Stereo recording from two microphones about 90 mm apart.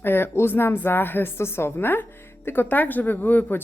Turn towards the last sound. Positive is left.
turn(degrees=20)  # may be behind; listen again after turning